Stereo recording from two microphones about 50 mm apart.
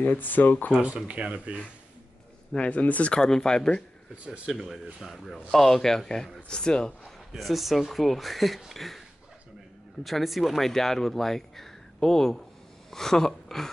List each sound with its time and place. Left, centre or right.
0.0 s speech: left
0.7 s speech: centre
2.5 s speech: left
3.2 s speech: centre
4.3 s speech: centre
7.3 s speech: centre
10.0 s speech: centre